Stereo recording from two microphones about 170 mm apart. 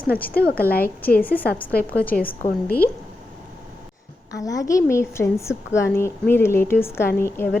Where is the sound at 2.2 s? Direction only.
60° left (ahead or behind).